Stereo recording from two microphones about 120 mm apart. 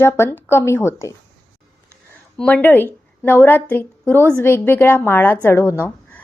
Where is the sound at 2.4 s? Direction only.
15° left (ahead or behind).